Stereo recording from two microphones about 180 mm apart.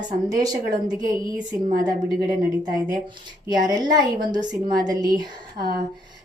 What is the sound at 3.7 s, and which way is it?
A woman's voice, 20° right (ahead or behind).